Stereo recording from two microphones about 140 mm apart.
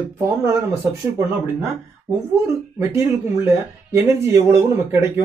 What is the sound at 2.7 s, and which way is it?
Speech, 20° right (ahead or behind).